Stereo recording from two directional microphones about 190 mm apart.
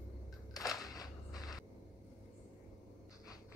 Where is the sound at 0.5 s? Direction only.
20° left (ahead or behind).